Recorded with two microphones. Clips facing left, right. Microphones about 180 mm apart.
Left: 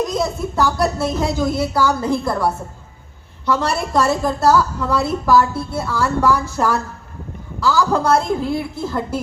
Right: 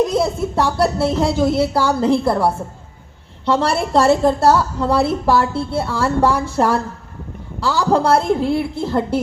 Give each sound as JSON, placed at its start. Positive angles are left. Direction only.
{"t": 0.0, "sound": "a woman's voice", "side_deg": -30}